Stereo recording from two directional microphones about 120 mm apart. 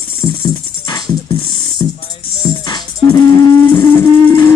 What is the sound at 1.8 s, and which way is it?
Music, 30° left (ahead or behind).